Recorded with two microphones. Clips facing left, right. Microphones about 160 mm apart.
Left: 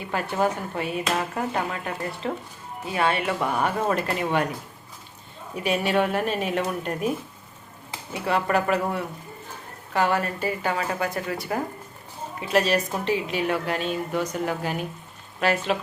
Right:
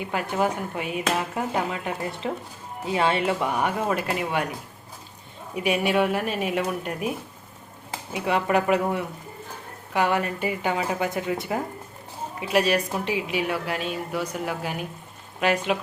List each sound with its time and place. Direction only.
0.0 s a woman's voice: 15° right (ahead or behind)
5.5 s a woman's voice: 10° right (ahead or behind)
8.1 s a woman's voice: 15° right (ahead or behind)